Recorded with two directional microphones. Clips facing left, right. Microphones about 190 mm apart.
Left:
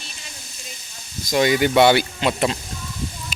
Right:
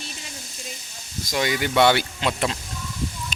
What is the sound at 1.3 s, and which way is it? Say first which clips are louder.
Speech: left 6 dB; 20° left (ahead or behind).